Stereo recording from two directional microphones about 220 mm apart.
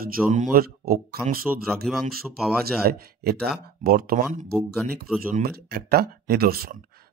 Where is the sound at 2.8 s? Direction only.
45° right (ahead or behind).